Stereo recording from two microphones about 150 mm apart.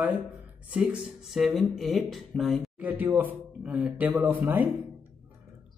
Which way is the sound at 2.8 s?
10° right (ahead or behind).